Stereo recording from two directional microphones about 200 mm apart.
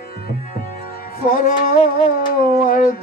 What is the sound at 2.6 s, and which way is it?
Dog, 45° left (ahead or behind).